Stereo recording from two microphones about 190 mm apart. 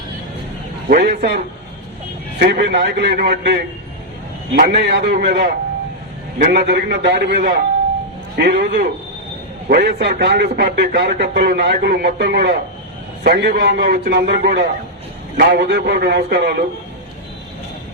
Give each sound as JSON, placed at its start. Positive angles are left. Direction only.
{"t": 0.9, "sound": "a man's voice", "side_deg": -50}
{"t": 2.4, "sound": "a man's voice", "side_deg": -55}
{"t": 6.5, "sound": "a man's voice", "side_deg": -60}
{"t": 13.2, "sound": "a man's voice", "side_deg": -50}